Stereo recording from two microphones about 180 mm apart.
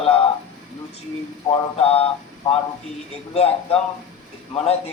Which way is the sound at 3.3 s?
35° left (ahead or behind).